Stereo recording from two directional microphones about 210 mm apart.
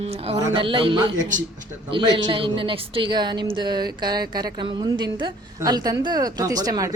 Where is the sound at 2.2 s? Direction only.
25° right (ahead or behind).